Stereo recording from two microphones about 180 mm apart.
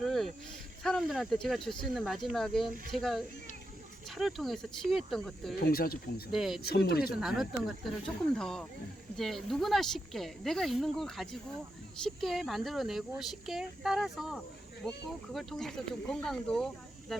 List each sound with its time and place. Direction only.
0.0 s a sound: centre (ahead or behind)
0.8 s speech: centre (ahead or behind)
5.5 s speech: 55° left (ahead or behind)
6.3 s speech: centre (ahead or behind)
6.6 s speech: 60° left (ahead or behind)
7.2 s speech: centre (ahead or behind)